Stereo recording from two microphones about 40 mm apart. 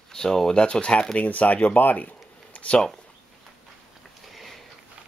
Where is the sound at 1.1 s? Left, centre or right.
Left.